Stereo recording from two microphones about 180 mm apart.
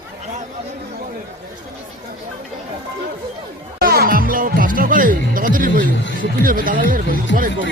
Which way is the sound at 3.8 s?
55° right (ahead or behind).